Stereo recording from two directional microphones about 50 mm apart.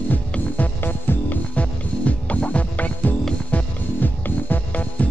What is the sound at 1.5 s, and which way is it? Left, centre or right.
Music, left.